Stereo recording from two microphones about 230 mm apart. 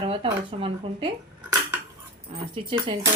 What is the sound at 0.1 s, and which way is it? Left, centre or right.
Speech, right.